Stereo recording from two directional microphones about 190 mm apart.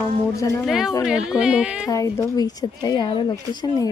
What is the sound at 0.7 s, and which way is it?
A woman's voice, centre (ahead or behind).